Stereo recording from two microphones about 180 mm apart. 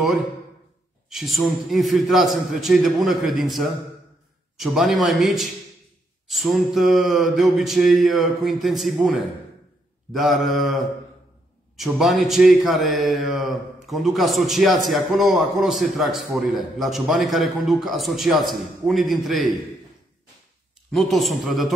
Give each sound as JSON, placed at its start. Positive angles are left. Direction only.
{"t": 0.0, "sound": "a man's voice", "side_deg": 0}
{"t": 20.9, "sound": "a man's voice", "side_deg": 0}